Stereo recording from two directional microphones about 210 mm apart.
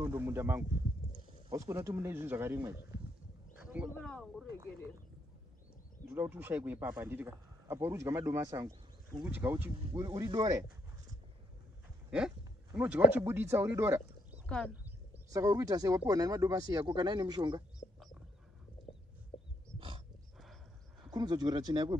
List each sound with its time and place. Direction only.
0.0 s speech: 10° right (ahead or behind)
3.9 s speech: 5° left (ahead or behind)
6.0 s speech: 10° right (ahead or behind)
12.7 s speech: 5° right (ahead or behind)
17.9 s a sound: centre (ahead or behind)
21.1 s speech: 20° right (ahead or behind)